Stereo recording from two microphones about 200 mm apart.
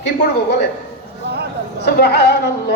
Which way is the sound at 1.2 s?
55° right (ahead or behind).